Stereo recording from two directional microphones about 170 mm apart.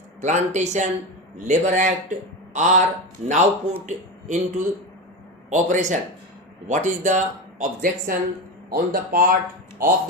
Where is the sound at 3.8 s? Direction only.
45° right (ahead or behind).